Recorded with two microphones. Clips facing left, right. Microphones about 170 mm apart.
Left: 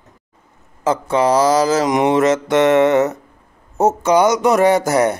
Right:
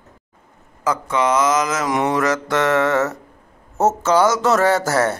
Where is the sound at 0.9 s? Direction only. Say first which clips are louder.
Left 4 dB; 30° left (ahead or behind).